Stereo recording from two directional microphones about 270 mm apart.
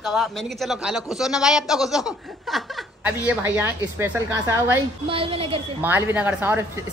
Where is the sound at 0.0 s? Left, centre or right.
Centre.